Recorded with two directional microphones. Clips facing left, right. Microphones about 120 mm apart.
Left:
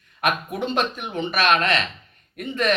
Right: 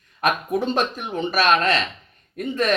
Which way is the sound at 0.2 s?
35° right (ahead or behind).